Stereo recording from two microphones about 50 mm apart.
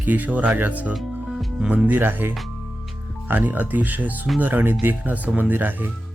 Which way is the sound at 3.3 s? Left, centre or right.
Right.